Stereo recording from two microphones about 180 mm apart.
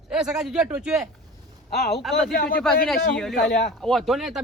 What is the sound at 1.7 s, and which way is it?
Speech, 60° left (ahead or behind).